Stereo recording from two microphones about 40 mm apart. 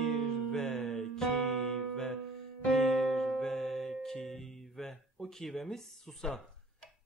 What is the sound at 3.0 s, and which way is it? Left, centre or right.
Music, centre.